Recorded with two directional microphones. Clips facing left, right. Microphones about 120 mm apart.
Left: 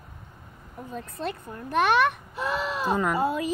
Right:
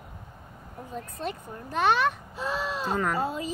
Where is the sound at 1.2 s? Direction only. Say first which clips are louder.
Left 3 dB; 60° left (ahead or behind).